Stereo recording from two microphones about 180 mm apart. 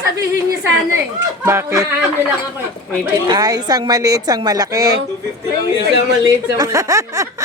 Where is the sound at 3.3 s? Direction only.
20° right (ahead or behind).